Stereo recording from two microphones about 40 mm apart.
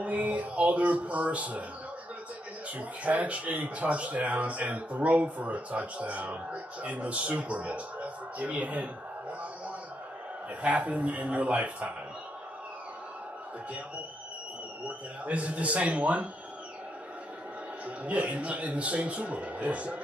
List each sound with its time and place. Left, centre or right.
0.0 s speech: right
2.8 s speech: right
10.6 s speech: right
14.9 s speech: right
17.8 s speech: right